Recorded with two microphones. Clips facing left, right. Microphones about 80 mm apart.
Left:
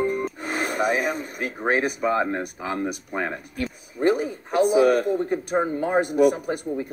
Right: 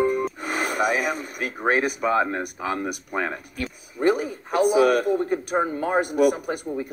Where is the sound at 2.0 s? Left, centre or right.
Centre.